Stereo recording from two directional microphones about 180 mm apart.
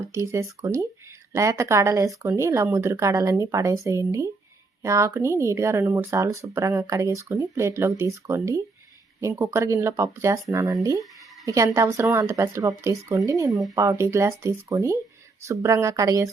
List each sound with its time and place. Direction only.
0.1 s speech: 15° right (ahead or behind)
13.5 s speech: centre (ahead or behind)
13.7 s speech: 15° right (ahead or behind)